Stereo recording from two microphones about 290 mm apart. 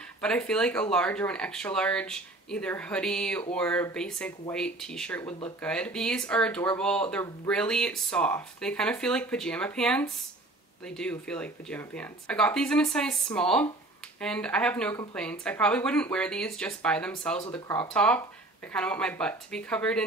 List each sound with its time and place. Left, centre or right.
0.2 s speech: centre